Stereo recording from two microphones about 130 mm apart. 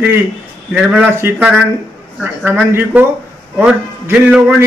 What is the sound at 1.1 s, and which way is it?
A man's voice, 20° right (ahead or behind).